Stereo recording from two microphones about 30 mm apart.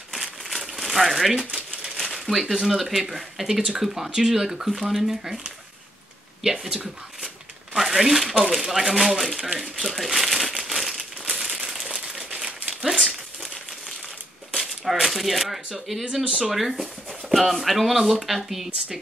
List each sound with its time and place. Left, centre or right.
0.1 s crumpling: centre
2.1 s a sound: centre
2.5 s speech: centre
6.4 s speech: centre
9.2 s speech: centre
9.9 s crumpling: centre; by 13.0 s right
13.0 s crumpling: centre
14.5 s a sound: centre
15.5 s speech: centre
16.3 s speech: right
16.8 s speech: centre